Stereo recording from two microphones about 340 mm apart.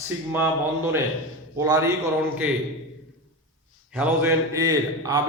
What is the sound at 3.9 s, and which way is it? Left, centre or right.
A man's voice, centre.